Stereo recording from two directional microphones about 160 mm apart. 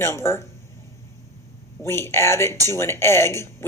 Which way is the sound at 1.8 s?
15° left (ahead or behind).